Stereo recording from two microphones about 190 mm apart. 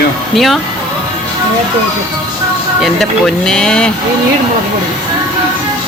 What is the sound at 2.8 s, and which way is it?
Speech, centre (ahead or behind).